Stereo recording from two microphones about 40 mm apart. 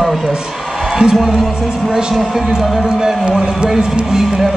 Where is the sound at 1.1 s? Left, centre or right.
Centre.